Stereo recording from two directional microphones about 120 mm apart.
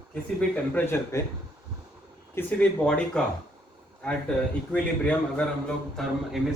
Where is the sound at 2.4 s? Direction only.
20° left (ahead or behind).